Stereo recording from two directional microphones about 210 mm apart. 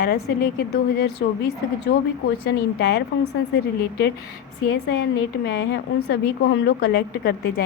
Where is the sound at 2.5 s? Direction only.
50° left (ahead or behind).